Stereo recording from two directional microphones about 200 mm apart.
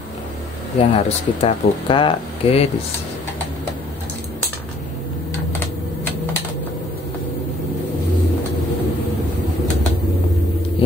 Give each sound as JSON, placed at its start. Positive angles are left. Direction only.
{"t": 0.7, "sound": "speech", "side_deg": 30}